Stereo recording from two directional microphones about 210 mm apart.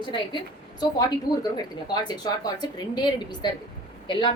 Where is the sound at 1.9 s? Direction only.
20° left (ahead or behind).